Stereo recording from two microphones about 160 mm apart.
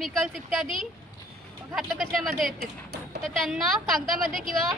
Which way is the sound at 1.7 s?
Centre (ahead or behind).